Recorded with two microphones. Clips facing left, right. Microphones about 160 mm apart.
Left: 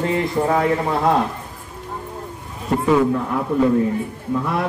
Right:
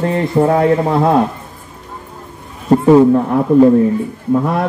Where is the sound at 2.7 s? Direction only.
35° right (ahead or behind).